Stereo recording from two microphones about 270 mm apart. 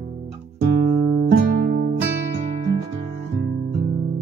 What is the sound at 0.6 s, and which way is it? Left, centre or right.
Music, right.